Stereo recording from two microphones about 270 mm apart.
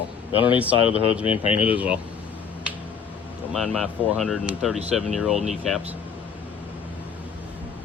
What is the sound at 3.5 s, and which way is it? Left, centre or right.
Speech, centre.